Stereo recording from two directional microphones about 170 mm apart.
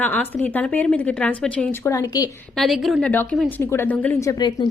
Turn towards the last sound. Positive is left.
turn(degrees=25)  # may be behind; listen again after turning